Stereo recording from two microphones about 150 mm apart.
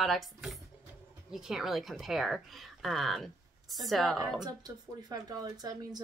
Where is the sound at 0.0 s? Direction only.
Centre (ahead or behind).